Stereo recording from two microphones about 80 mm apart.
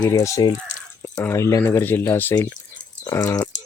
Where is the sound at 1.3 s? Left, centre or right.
Left.